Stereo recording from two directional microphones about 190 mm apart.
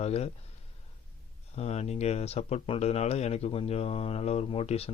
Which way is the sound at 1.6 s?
35° left (ahead or behind).